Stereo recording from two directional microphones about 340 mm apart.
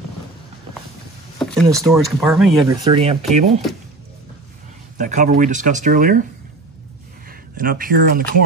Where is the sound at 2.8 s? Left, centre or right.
Centre.